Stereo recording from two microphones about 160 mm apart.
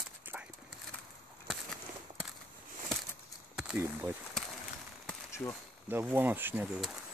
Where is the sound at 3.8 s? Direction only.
15° right (ahead or behind).